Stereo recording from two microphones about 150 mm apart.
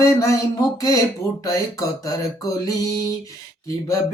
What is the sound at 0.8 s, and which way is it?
Speech, 20° left (ahead or behind).